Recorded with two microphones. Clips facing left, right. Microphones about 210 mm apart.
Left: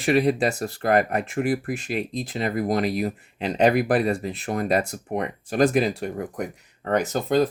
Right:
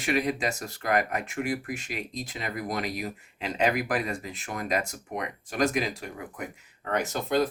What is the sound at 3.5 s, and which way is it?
Speech, 35° left (ahead or behind).